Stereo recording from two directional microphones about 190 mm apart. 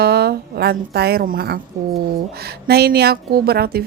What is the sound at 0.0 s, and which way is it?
A woman's voice, 55° right (ahead or behind).